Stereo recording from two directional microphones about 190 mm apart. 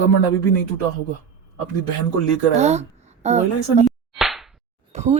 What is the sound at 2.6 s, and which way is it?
A woman's voice, 35° right (ahead or behind).